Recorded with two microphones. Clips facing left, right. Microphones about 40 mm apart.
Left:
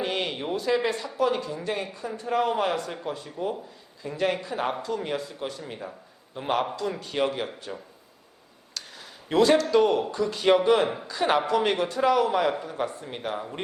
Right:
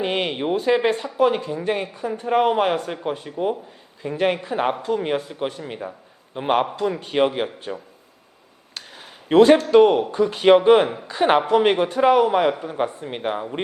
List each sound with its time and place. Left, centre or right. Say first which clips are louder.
0.0 s a man's voice: right 6 dB; right
8.7 s a sound: right 2 dB; right
9.7 s a man's voice: right 7 dB; right